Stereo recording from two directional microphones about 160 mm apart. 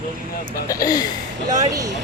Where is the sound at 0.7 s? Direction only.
25° left (ahead or behind).